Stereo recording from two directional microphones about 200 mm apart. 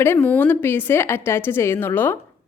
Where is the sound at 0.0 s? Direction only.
10° left (ahead or behind).